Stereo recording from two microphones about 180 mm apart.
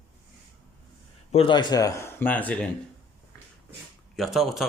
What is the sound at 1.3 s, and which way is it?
Speech, 30° left (ahead or behind).